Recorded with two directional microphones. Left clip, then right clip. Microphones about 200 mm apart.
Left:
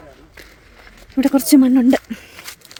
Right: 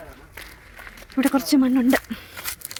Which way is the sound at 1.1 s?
35° left (ahead or behind).